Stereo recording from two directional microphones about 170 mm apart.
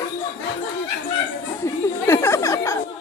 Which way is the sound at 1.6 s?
15° left (ahead or behind).